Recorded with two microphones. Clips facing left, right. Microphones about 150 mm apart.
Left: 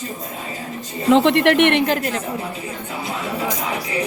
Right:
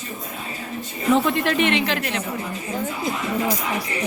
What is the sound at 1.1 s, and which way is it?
Speech, 85° left.